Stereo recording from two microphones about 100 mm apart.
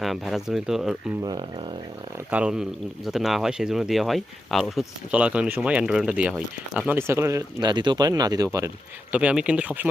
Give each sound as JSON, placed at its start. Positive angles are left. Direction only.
{"t": 0.0, "sound": "a man's voice", "side_deg": 0}
{"t": 1.2, "sound": "speech", "side_deg": -40}
{"t": 2.3, "sound": "a man's voice", "side_deg": -10}
{"t": 5.1, "sound": "speech", "side_deg": -10}
{"t": 7.1, "sound": "speech", "side_deg": -30}
{"t": 7.6, "sound": "speech", "side_deg": -45}
{"t": 9.1, "sound": "speech", "side_deg": -10}